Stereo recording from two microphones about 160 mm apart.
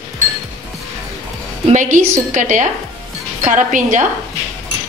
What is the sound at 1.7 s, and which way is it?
A woman's voice, 50° right (ahead or behind).